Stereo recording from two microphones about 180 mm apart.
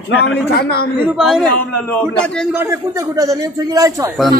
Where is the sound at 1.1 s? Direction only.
Centre (ahead or behind).